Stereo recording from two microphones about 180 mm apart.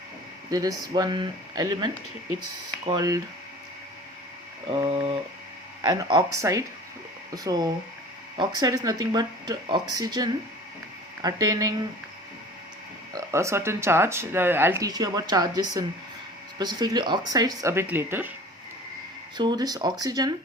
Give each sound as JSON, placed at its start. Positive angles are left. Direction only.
{"t": 0.5, "sound": "speech", "side_deg": -20}
{"t": 4.8, "sound": "a sound", "side_deg": -35}
{"t": 5.8, "sound": "speech", "side_deg": -20}
{"t": 13.1, "sound": "speech", "side_deg": -15}
{"t": 19.4, "sound": "speech", "side_deg": -25}